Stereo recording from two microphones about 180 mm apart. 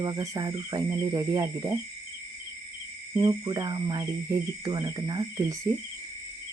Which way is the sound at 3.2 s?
25° right (ahead or behind).